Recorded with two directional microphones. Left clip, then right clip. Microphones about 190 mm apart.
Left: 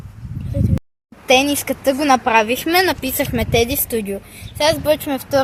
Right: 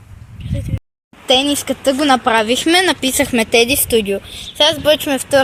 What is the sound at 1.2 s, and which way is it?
Speech, 20° right (ahead or behind).